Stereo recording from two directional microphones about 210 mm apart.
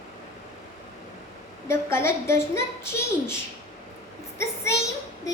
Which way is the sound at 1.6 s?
10° left (ahead or behind).